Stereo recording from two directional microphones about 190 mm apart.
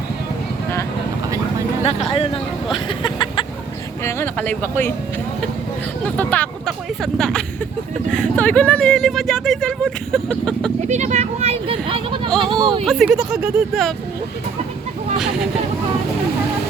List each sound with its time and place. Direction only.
1.8 s speech: 30° left (ahead or behind)
2.7 s a sound: 25° left (ahead or behind)
4.0 s speech: 10° left (ahead or behind)
6.1 s speech: 5° left (ahead or behind)
10.8 s speech: 35° right (ahead or behind)
12.8 s speech: centre (ahead or behind)